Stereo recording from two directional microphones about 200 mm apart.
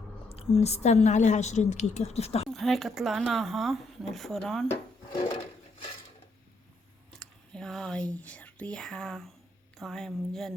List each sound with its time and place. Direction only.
0.3 s a woman's voice: 30° left (ahead or behind)
2.5 s speech: centre (ahead or behind)
7.2 s a sound: 5° left (ahead or behind)
8.1 s speech: 5° left (ahead or behind)